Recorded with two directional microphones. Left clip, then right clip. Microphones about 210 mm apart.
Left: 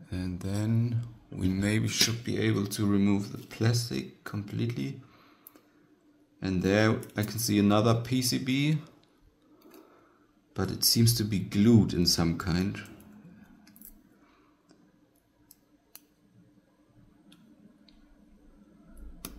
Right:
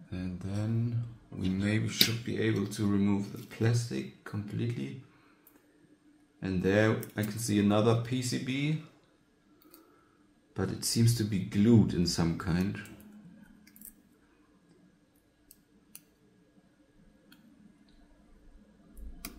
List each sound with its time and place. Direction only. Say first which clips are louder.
0.1 s mantra: left 4 dB; 40° left (ahead or behind)
1.5 s speech: left 3 dB; 40° left (ahead or behind)
6.4 s speech: left 1 dB; 40° left (ahead or behind)
10.5 s speech: left 6 dB; 40° left (ahead or behind)